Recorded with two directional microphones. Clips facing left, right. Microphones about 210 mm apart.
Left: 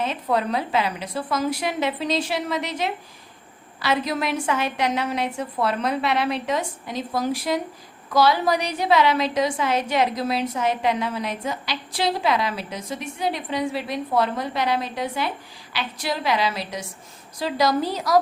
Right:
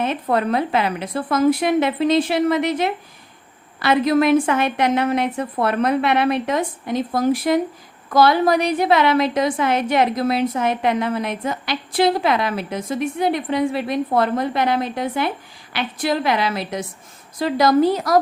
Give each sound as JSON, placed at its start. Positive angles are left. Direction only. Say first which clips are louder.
{"t": 0.0, "sound": "a woman's voice", "louder": "right 3 dB", "side_deg": -55}